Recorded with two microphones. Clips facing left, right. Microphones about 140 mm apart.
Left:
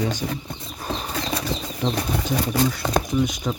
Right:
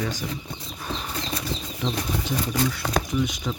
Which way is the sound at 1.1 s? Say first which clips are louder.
Left 5 dB; 85° left.